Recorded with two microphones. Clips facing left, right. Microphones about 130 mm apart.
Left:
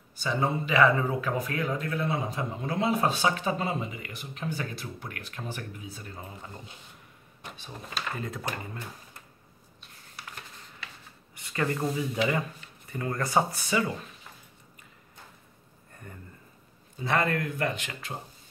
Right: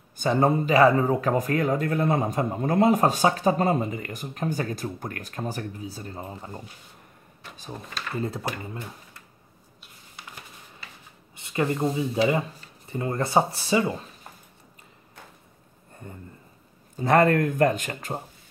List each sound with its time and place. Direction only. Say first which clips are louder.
0.2 s speech: right 7 dB; 50° right (ahead or behind); by 6.6 s 35° right (ahead or behind)
8.2 s speech: right 6 dB; 30° right (ahead or behind)
11.3 s speech: right 4 dB; 20° right (ahead or behind)
16.9 s speech: right 8 dB; 45° right (ahead or behind)